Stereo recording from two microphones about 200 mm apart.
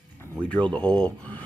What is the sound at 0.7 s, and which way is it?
Speech, 5° left (ahead or behind).